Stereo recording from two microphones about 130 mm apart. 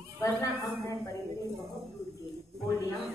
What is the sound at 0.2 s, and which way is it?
Speech, 25° left (ahead or behind).